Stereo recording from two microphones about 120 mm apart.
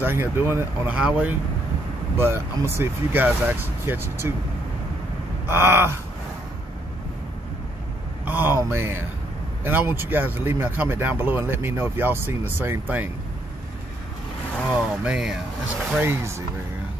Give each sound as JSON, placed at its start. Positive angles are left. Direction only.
{"t": 0.0, "sound": "speech", "side_deg": -20}
{"t": 5.5, "sound": "speech", "side_deg": -20}
{"t": 8.3, "sound": "speech", "side_deg": -15}
{"t": 14.7, "sound": "speech", "side_deg": -10}
{"t": 16.0, "sound": "speech", "side_deg": -20}